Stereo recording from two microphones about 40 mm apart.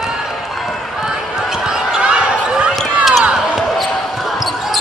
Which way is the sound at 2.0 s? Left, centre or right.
Right.